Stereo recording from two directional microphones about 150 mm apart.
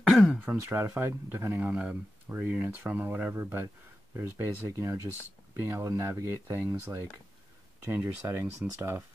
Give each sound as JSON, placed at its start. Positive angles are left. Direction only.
{"t": 0.1, "sound": "throat clearing", "side_deg": 0}
{"t": 0.5, "sound": "speech", "side_deg": -20}